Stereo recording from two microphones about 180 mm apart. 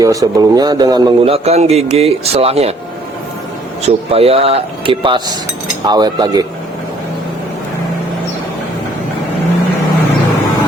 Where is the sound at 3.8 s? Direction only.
35° right (ahead or behind).